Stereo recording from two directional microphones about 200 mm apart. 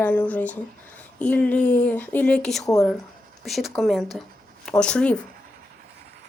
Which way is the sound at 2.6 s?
15° left (ahead or behind).